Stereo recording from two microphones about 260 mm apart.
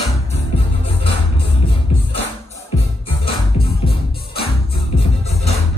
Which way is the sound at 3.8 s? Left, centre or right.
Left.